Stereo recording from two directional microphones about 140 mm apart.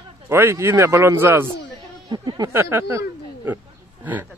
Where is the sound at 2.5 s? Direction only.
15° right (ahead or behind).